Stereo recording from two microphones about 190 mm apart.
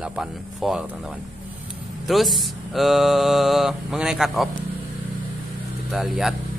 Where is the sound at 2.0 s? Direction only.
Centre (ahead or behind).